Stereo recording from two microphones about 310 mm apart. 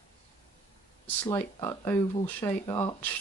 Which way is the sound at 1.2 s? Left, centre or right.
Centre.